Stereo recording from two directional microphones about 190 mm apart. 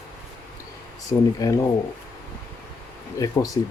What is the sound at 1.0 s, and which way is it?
Speech, 20° left (ahead or behind).